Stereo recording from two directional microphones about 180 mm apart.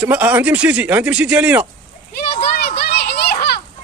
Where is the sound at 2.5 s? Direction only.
60° left (ahead or behind).